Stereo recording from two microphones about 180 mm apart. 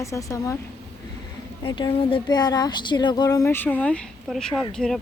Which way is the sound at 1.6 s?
25° left (ahead or behind).